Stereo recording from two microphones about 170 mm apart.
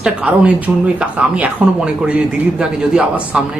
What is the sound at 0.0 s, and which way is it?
Speech, 5° right (ahead or behind).